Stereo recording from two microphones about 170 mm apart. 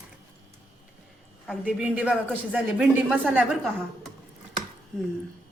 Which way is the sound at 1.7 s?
10° right (ahead or behind).